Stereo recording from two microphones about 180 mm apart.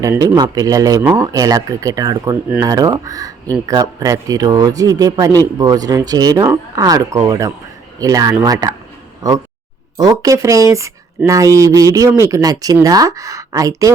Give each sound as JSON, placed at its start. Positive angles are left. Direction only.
{"t": 0.0, "sound": "speech", "side_deg": -20}